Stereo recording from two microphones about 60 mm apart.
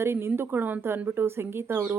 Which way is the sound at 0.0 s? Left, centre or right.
Right.